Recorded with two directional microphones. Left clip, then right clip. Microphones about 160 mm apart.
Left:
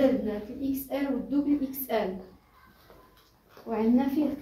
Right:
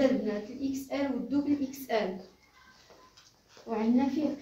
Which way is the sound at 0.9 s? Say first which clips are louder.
Left 1 dB; 15° right (ahead or behind).